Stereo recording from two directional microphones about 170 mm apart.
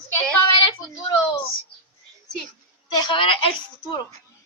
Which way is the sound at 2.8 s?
30° left (ahead or behind).